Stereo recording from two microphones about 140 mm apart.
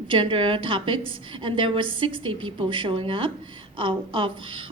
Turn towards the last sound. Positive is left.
turn(degrees=-40)  # may be behind; listen again after turning